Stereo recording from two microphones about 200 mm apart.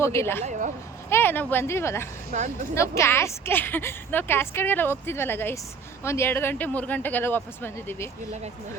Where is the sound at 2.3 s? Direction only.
40° right (ahead or behind).